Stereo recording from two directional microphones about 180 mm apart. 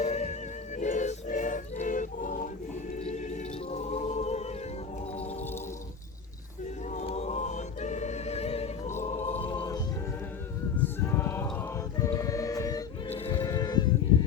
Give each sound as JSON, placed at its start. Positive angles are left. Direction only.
{"t": 0.0, "sound": "music", "side_deg": 40}
{"t": 0.8, "sound": "choir", "side_deg": 45}
{"t": 3.0, "sound": "music", "side_deg": 40}
{"t": 5.1, "sound": "gargling", "side_deg": 35}
{"t": 6.8, "sound": "choir", "side_deg": 40}
{"t": 10.8, "sound": "music", "side_deg": 10}
{"t": 13.1, "sound": "music", "side_deg": 35}
{"t": 13.4, "sound": "livestock", "side_deg": 20}